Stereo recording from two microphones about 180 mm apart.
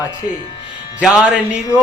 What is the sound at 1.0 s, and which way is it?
Speech, 5° right (ahead or behind).